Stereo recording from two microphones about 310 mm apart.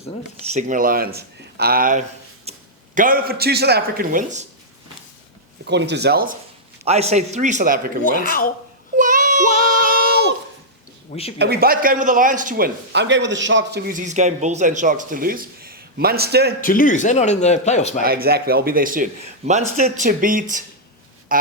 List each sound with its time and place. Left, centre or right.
0.5 s speech: right
5.6 s a man's voice: right
9.0 s child singing: right
9.9 s a sound: right
11.1 s a man's voice: centre
11.3 s a man's voice: right
16.6 s a man's voice: left
18.0 s a man's voice: right